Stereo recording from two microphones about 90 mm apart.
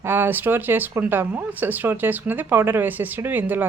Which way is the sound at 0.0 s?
25° right (ahead or behind).